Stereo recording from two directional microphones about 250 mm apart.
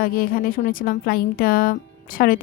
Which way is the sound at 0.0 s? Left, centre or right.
Left.